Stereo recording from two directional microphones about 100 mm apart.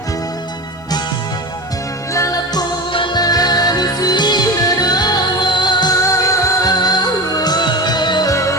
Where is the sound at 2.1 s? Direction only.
35° left (ahead or behind).